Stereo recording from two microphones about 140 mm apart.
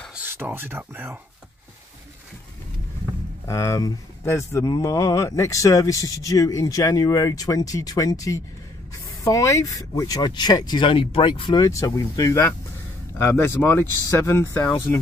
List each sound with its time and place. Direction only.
0.1 s speech: 15° right (ahead or behind)
3.4 s speech: 20° left (ahead or behind)